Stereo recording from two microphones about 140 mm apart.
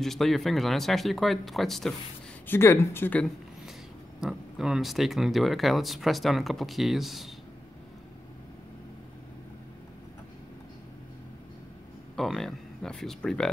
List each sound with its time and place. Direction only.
0.0 s speech: centre (ahead or behind)
2.4 s speech: 15° left (ahead or behind)
4.2 s speech: 5° right (ahead or behind)
12.2 s speech: centre (ahead or behind)